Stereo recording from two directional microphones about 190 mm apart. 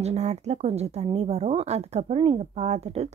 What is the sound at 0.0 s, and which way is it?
Speech, 35° right (ahead or behind).